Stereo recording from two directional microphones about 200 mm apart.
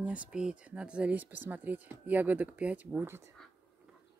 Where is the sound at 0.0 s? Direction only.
5° right (ahead or behind).